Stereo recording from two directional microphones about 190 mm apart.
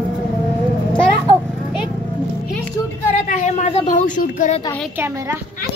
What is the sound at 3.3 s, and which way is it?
A woman's voice, 40° left (ahead or behind).